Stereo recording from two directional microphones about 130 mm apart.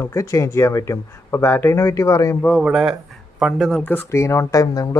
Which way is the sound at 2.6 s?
5° right (ahead or behind).